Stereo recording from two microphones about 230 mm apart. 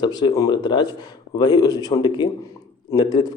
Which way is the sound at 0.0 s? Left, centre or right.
Centre.